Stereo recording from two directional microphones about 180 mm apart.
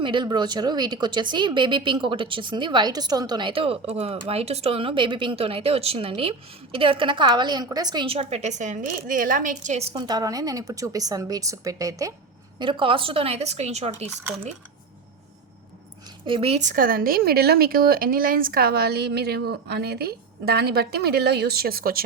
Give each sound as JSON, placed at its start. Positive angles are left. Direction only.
{"t": 0.0, "sound": "speech", "side_deg": -25}
{"t": 9.9, "sound": "speech", "side_deg": -25}
{"t": 16.2, "sound": "a woman's voice", "side_deg": -30}